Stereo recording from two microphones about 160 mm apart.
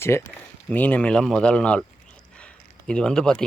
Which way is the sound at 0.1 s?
15° left (ahead or behind).